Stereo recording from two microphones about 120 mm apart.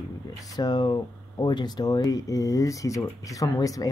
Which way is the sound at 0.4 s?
35° left (ahead or behind).